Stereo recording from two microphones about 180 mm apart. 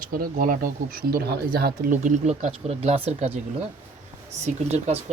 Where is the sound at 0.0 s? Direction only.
50° right (ahead or behind); by 3.2 s 35° right (ahead or behind).